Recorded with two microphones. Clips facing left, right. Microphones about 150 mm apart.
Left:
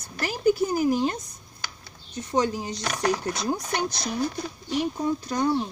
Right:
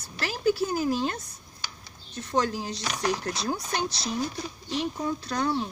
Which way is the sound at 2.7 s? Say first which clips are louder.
Left 3 dB; 55° left (ahead or behind).